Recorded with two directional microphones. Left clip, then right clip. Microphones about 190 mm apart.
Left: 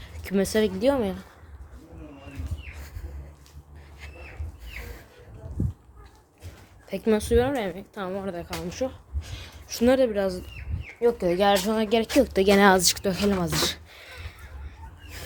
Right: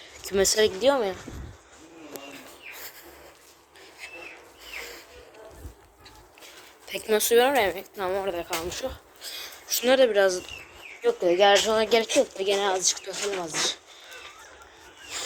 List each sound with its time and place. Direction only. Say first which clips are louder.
0.1 s speech: right 2 dB; centre (ahead or behind)
0.8 s speech: right 1 dB; 15° left (ahead or behind)
6.8 s speech: even; 5° left (ahead or behind)
10.1 s speech: right 5 dB; centre (ahead or behind)
12.2 s speech: left 5 dB; 35° left (ahead or behind)
12.6 s speech: left 6 dB; 55° left (ahead or behind)